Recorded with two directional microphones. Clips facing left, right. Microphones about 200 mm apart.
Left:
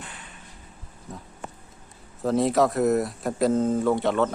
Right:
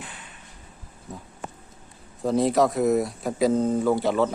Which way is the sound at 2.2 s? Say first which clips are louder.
Right 1 dB; centre (ahead or behind).